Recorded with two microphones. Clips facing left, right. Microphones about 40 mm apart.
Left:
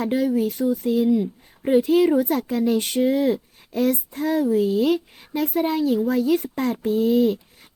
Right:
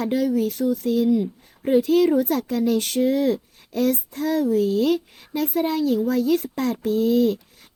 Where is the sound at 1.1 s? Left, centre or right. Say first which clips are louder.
Even; centre.